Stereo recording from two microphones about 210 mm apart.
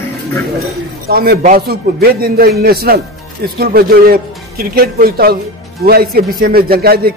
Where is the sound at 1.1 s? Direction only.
45° right (ahead or behind).